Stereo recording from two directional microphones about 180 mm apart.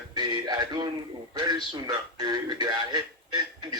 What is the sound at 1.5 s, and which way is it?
Music, 20° right (ahead or behind).